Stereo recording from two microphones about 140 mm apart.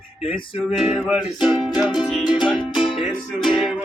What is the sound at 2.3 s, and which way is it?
Music, 35° left (ahead or behind).